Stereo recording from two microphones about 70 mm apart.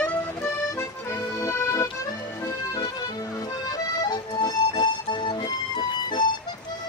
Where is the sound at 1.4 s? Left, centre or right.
Left.